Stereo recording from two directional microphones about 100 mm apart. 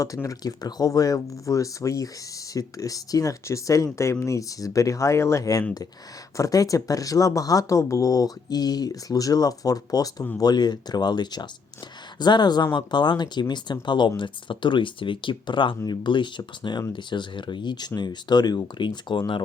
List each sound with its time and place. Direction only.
0.0 s speech: 35° left (ahead or behind); by 19.4 s 50° left (ahead or behind)